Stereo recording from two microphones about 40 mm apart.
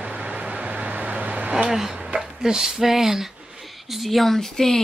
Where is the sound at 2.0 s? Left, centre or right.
Centre.